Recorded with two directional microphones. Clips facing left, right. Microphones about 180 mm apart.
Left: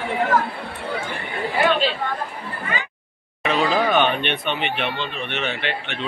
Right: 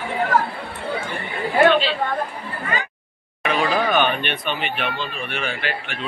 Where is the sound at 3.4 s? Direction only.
25° left (ahead or behind).